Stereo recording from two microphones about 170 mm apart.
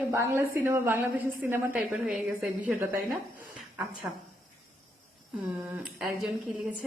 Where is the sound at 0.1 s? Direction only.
15° right (ahead or behind).